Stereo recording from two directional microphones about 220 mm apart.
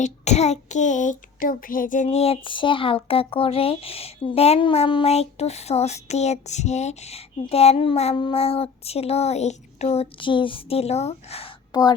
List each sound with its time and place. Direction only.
0.0 s child singing: 30° left (ahead or behind)